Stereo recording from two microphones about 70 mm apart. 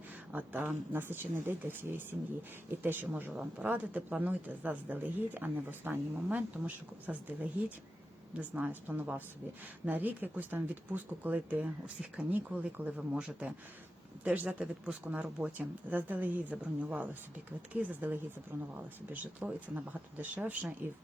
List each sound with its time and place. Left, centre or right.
0.3 s speech: right